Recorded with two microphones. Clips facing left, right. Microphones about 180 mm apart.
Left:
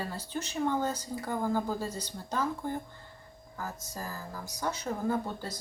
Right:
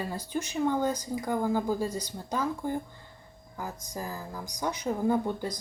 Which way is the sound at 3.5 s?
15° right (ahead or behind).